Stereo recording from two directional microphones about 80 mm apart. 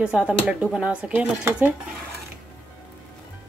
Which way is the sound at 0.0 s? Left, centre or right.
Centre.